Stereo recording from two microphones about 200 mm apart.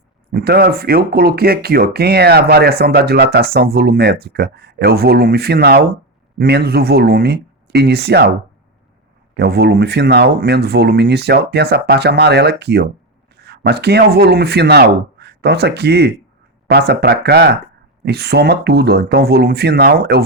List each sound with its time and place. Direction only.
0.3 s speech: 50° right (ahead or behind)
9.3 s speech: 55° right (ahead or behind)